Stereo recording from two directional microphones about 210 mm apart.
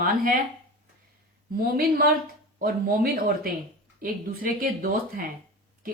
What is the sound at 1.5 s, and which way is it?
Speech, 45° right (ahead or behind).